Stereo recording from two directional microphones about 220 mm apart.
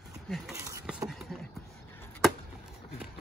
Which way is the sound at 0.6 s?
15° right (ahead or behind).